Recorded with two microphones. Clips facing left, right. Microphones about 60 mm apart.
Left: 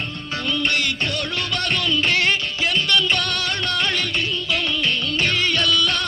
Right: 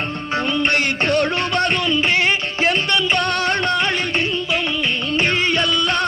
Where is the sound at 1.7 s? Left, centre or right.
Centre.